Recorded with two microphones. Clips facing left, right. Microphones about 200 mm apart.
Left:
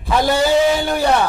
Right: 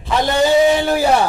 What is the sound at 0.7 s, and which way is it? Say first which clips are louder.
Speech: right 2 dB; centre (ahead or behind).